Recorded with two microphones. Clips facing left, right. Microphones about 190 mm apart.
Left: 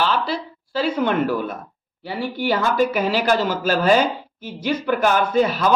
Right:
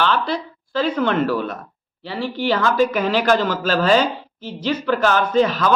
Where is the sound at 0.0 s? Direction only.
5° left (ahead or behind).